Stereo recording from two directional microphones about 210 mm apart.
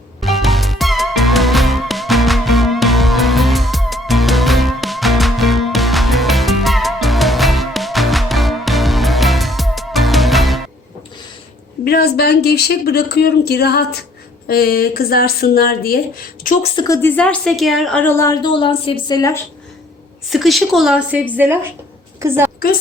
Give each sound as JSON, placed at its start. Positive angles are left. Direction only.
{"t": 0.2, "sound": "music", "side_deg": 0}
{"t": 11.9, "sound": "speech", "side_deg": 50}
{"t": 16.7, "sound": "a woman's voice", "side_deg": 15}
{"t": 20.3, "sound": "a woman's voice", "side_deg": 0}